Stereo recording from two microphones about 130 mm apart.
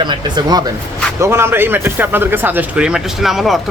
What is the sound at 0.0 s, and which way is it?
Speech, 35° right (ahead or behind).